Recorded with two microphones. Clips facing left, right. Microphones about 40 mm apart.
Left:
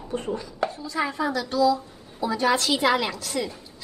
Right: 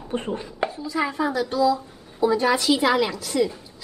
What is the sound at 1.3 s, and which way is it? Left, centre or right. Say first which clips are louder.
A woman's voice: left 1 dB; centre.